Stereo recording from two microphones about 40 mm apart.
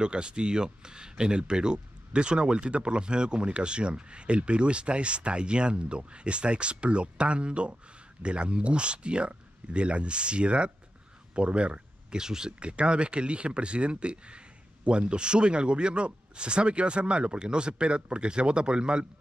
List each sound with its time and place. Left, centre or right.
0.0 s speech: right
12.2 s speech: centre
12.5 s speech: right